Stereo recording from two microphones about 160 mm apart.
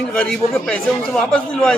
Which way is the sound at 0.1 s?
5° left (ahead or behind).